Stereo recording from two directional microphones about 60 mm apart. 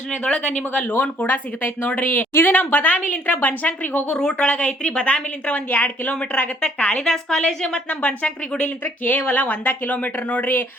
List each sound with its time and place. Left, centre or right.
0.1 s a woman's voice: centre
0.9 s a woman's voice: left
4.2 s a woman's voice: centre
7.9 s a woman's voice: left